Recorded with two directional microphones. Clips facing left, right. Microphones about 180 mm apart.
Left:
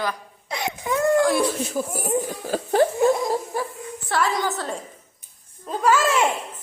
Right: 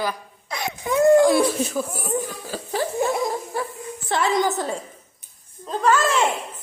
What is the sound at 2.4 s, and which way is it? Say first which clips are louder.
Speech: left 7 dB; 50° left (ahead or behind).